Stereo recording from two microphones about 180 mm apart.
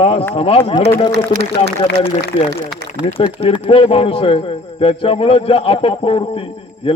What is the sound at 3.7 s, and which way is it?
A man's voice, 30° left (ahead or behind).